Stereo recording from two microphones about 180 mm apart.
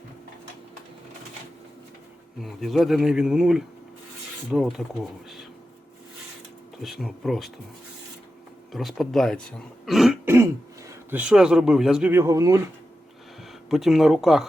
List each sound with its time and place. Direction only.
2.4 s speech: centre (ahead or behind)
6.8 s speech: centre (ahead or behind)
8.7 s speech: centre (ahead or behind)
10.2 s speech: 15° right (ahead or behind)
12.1 s speech: 15° right (ahead or behind)
13.7 s speech: centre (ahead or behind)